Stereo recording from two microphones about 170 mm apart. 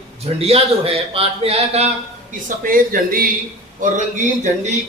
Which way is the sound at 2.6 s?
55° right (ahead or behind).